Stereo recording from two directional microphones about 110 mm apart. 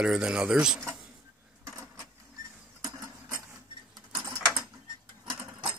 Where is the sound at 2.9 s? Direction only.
25° right (ahead or behind).